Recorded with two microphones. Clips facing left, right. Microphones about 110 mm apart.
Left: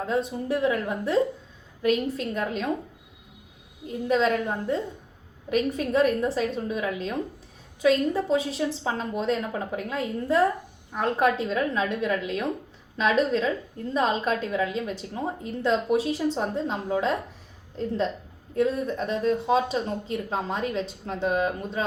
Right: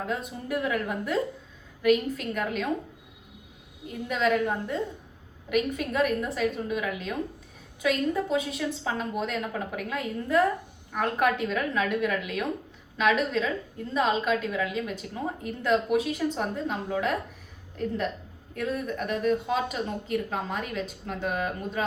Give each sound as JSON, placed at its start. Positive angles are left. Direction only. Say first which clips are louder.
{"t": 0.0, "sound": "speech", "louder": "left 5 dB", "side_deg": 30}
{"t": 5.5, "sound": "a woman's voice", "louder": "left 2 dB", "side_deg": 30}